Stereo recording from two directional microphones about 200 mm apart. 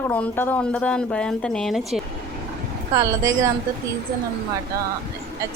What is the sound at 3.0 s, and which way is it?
Speech, 15° right (ahead or behind).